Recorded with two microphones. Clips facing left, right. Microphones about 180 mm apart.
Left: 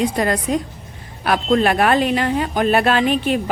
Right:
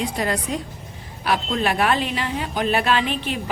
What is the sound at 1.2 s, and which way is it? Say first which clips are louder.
A man's voice: left 6 dB; 50° left (ahead or behind).